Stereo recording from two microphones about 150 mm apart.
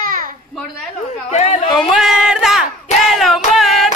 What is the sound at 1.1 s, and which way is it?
Speech, 50° left (ahead or behind).